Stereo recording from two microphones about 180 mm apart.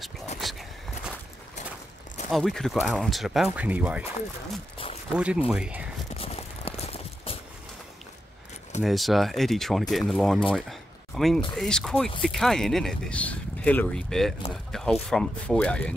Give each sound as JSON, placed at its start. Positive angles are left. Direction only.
{"t": 0.4, "sound": "a sound", "side_deg": 0}
{"t": 2.3, "sound": "speech", "side_deg": 0}
{"t": 5.1, "sound": "speech", "side_deg": -5}
{"t": 6.1, "sound": "clip-clop", "side_deg": 35}
{"t": 8.8, "sound": "speech", "side_deg": 0}